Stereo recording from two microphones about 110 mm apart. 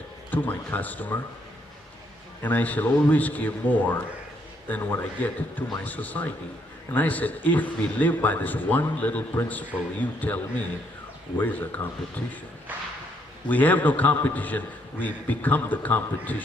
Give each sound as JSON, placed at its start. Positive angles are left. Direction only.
{"t": 0.3, "sound": "a man's voice", "side_deg": 15}
{"t": 2.4, "sound": "a man's voice", "side_deg": 15}
{"t": 13.5, "sound": "a man's voice", "side_deg": 15}